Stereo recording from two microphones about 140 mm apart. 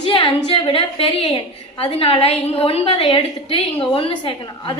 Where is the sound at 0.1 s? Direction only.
35° left (ahead or behind).